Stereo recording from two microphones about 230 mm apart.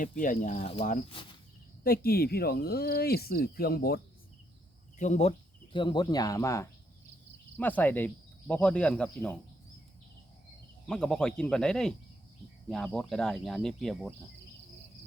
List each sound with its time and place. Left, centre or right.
0.0 s speech: left
1.8 s speech: left
4.9 s speech: left; by 9.4 s centre
10.8 s speech: centre